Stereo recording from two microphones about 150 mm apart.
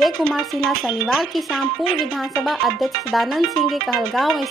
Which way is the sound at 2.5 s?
Centre (ahead or behind).